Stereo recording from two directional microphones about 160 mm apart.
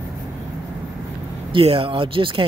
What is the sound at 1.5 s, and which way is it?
Speech, 35° right (ahead or behind).